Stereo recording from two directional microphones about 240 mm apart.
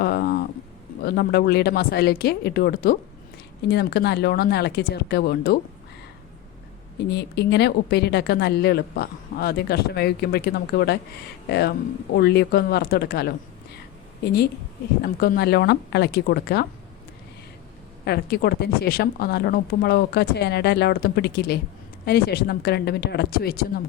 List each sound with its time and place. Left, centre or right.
0.0 s a sound: left
1.0 s a woman's voice: left
7.1 s a woman's voice: left
15.0 s a woman's voice: left
18.0 s a woman's voice: left